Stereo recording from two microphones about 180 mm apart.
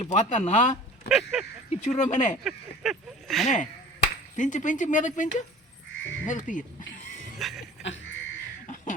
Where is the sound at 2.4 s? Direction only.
Centre (ahead or behind).